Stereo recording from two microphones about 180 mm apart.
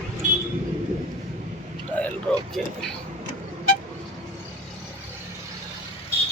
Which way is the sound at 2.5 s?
5° left (ahead or behind).